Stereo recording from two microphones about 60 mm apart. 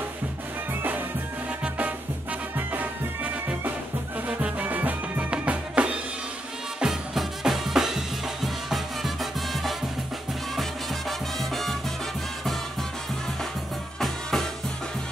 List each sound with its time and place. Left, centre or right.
1.6 s music: right
6.8 s music: centre
13.9 s music: centre